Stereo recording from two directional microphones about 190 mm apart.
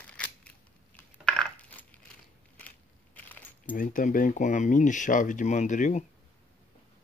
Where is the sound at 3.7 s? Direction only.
45° left (ahead or behind).